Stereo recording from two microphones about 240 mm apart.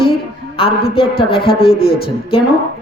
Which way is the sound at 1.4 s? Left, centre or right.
Left.